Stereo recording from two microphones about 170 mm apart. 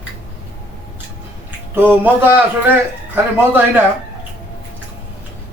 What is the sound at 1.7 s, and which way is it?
Speech, 10° right (ahead or behind).